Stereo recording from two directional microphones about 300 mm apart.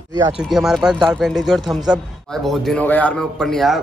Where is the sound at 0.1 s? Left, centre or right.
Centre.